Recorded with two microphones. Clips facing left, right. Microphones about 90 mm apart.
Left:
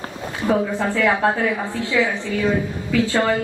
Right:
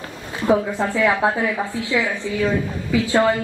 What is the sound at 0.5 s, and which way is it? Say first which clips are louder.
A woman's voice: right 1 dB; 15° right (ahead or behind).